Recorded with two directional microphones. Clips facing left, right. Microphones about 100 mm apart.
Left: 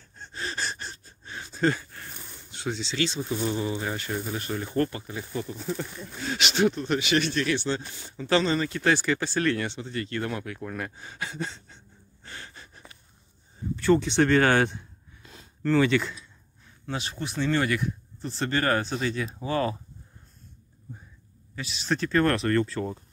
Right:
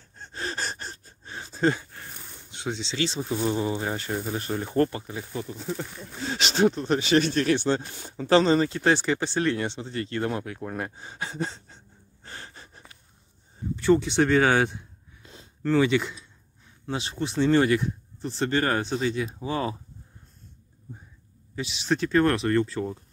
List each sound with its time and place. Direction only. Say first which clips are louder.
0.2 s gasp: right 1 dB; 40° right (ahead or behind)
1.3 s a sound: right 1 dB; 30° right (ahead or behind)
2.5 s speech: even; 20° right (ahead or behind)
13.7 s speech: right 1 dB; 15° right (ahead or behind)
16.8 s speech: right 3 dB; 25° right (ahead or behind)
21.5 s speech: right 2 dB; 20° right (ahead or behind)